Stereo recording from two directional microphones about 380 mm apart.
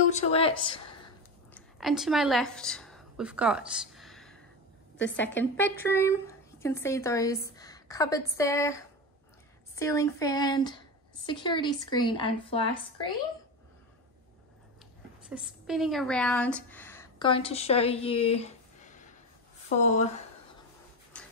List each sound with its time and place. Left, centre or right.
0.1 s a sound: centre
1.8 s a woman's voice: centre
15.2 s a woman's voice: centre